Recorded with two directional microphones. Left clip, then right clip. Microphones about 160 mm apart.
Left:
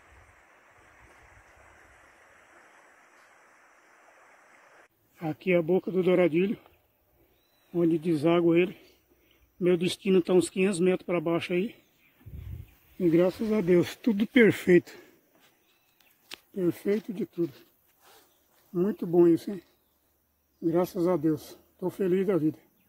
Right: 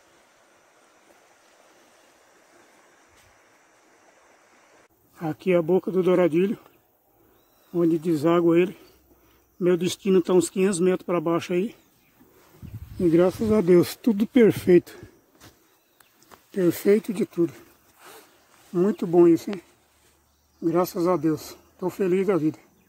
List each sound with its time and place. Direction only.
5.1 s speech: 5° right (ahead or behind)
7.7 s speech: centre (ahead or behind)
13.0 s speech: 5° right (ahead or behind)
13.3 s speech: 15° right (ahead or behind)
16.8 s speech: 40° right (ahead or behind)
18.7 s speech: 20° right (ahead or behind)
19.1 s speech: centre (ahead or behind)
20.6 s speech: 5° left (ahead or behind)